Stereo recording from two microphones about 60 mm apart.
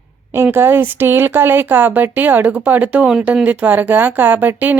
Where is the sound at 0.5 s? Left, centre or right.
Right.